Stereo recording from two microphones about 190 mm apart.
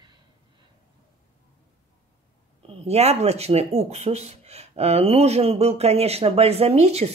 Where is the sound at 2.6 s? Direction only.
35° right (ahead or behind).